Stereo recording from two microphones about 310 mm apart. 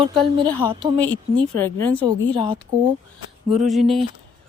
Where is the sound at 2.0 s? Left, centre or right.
Centre.